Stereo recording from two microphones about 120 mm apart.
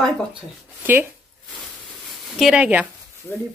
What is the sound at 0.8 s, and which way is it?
Speech, 15° right (ahead or behind).